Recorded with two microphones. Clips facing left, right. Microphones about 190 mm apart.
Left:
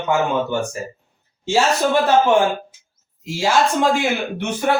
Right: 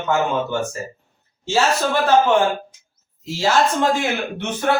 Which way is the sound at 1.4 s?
15° left (ahead or behind).